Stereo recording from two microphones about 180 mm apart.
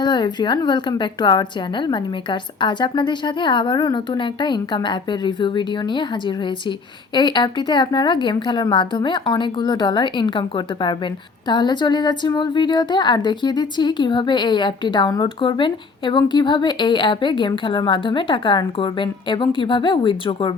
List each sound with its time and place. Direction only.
0.0 s a woman's voice: 25° left (ahead or behind)